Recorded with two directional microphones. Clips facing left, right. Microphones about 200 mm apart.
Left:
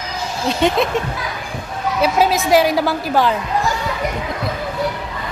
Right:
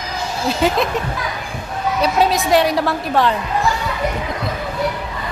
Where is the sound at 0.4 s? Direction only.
Centre (ahead or behind).